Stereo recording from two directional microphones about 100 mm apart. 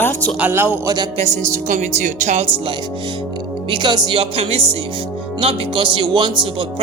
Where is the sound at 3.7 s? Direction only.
50° right (ahead or behind).